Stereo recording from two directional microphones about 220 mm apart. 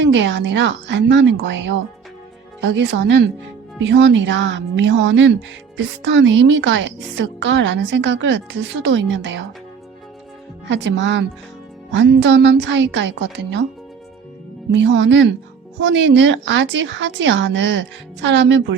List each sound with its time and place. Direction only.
0.0 s a woman's voice: 55° right (ahead or behind)
10.7 s a woman's voice: 55° right (ahead or behind)
14.7 s speech: 55° right (ahead or behind)